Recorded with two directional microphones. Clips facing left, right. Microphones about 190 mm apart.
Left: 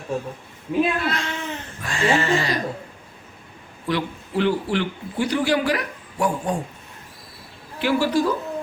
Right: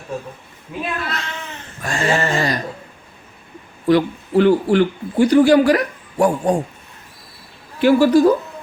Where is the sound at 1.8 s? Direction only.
45° right (ahead or behind).